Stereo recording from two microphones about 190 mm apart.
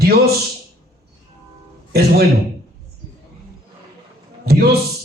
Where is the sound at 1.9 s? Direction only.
55° right (ahead or behind).